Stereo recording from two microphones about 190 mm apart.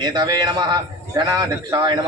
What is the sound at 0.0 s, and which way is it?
A man's voice, 20° right (ahead or behind).